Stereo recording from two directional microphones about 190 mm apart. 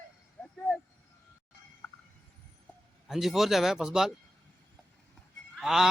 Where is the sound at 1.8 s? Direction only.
10° left (ahead or behind).